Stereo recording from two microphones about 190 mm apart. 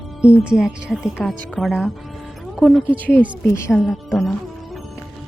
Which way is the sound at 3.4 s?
15° left (ahead or behind).